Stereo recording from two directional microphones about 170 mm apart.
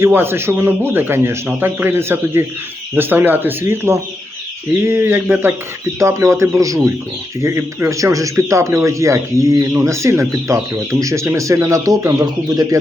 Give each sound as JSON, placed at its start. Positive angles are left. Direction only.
{"t": 0.0, "sound": "a man's voice", "side_deg": -15}